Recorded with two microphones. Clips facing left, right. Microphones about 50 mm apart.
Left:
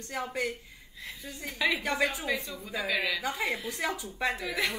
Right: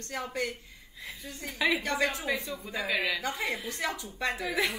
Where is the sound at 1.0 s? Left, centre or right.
Centre.